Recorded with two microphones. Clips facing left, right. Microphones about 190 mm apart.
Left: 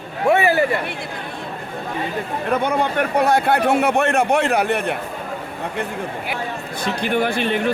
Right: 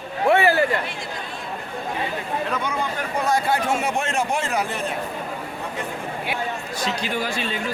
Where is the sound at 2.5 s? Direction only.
60° left (ahead or behind).